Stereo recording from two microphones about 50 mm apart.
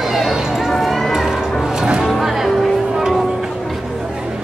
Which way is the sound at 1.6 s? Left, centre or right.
Centre.